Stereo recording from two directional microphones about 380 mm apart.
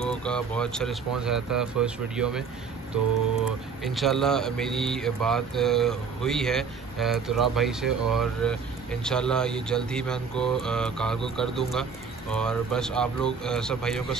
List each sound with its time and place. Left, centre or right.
0.0 s speech: centre
3.8 s speech: centre